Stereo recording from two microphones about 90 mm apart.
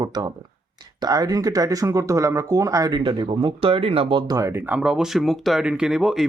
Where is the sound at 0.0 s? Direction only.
50° right (ahead or behind).